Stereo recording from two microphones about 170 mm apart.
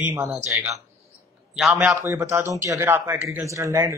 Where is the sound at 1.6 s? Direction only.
5° right (ahead or behind).